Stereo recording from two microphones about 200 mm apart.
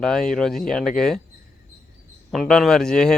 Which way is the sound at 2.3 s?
Centre (ahead or behind).